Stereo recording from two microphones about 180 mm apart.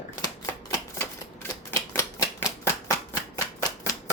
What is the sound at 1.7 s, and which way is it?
Typewriter, 15° left (ahead or behind).